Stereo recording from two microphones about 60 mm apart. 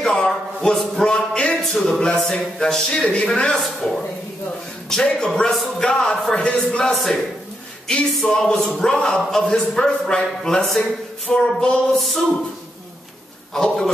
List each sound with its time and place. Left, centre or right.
0.0 s a sound: centre
0.7 s speech: centre
1.6 s speech: centre
3.6 s speech: centre
5.0 s speech: centre
6.9 s speech: centre
13.5 s a man's voice: centre